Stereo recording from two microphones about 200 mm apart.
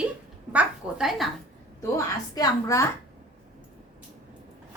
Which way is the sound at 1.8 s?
15° left (ahead or behind).